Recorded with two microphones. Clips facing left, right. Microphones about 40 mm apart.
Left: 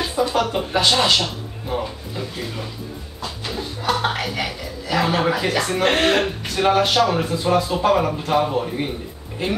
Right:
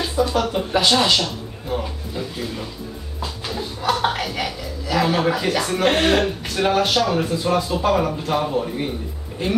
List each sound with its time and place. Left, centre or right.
0.0 s a man's voice: centre